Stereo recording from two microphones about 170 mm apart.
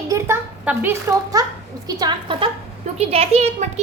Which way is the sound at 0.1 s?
10° right (ahead or behind).